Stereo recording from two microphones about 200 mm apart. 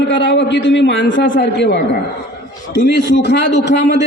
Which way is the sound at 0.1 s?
65° left (ahead or behind).